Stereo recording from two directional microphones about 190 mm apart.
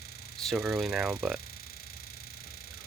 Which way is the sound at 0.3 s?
Centre (ahead or behind).